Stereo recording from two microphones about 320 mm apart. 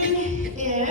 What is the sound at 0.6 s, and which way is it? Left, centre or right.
Speech, right.